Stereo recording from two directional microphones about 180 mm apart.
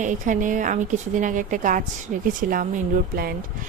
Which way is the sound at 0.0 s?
45° right (ahead or behind).